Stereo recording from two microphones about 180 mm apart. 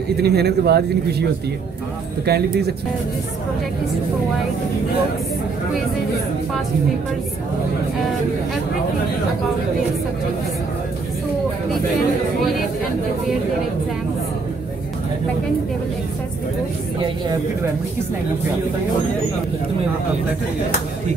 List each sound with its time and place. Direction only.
0.2 s speech: 65° right (ahead or behind)
2.2 s speech: 65° right (ahead or behind)